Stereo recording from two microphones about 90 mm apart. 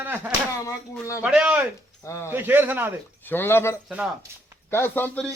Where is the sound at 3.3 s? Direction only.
25° left (ahead or behind).